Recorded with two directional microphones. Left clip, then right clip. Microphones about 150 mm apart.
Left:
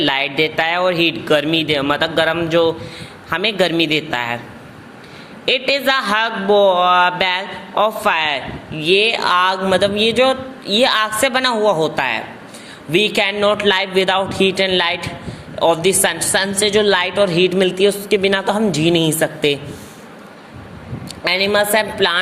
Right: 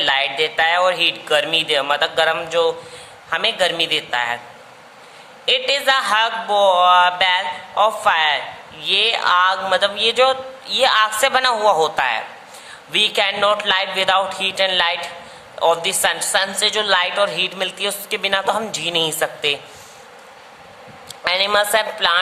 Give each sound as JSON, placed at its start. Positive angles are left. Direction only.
{"t": 0.0, "sound": "speech", "side_deg": 20}
{"t": 3.2, "sound": "speech", "side_deg": 30}
{"t": 5.5, "sound": "speech", "side_deg": 25}
{"t": 21.2, "sound": "speech", "side_deg": 10}